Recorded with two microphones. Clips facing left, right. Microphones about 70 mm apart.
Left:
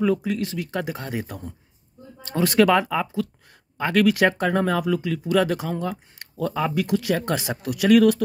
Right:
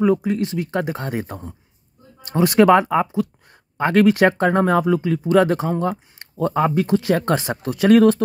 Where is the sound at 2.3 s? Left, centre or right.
Right.